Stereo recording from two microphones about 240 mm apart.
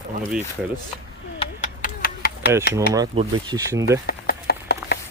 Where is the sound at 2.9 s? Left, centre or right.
Centre.